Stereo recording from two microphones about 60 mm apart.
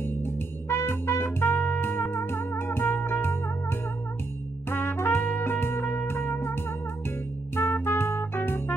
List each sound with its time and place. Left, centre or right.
0.0 s music: left
4.6 s music: left